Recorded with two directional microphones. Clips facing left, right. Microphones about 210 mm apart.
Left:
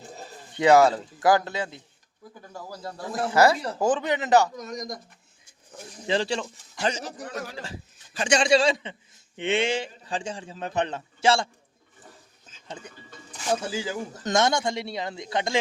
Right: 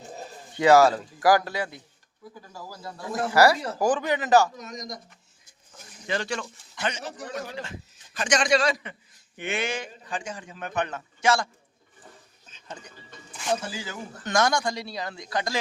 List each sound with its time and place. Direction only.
0.5 s a man's voice: 20° left (ahead or behind)
3.3 s a man's voice: 20° left (ahead or behind)
4.5 s speech: 45° left (ahead or behind)
6.1 s a man's voice: 30° left (ahead or behind)
12.6 s a man's voice: 25° left (ahead or behind)